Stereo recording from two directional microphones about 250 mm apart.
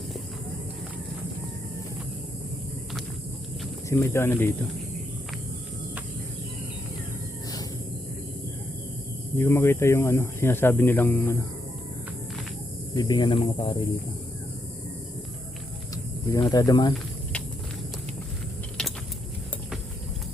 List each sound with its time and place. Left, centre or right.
3.8 s speech: centre
9.4 s speech: centre
12.9 s speech: centre
16.3 s speech: centre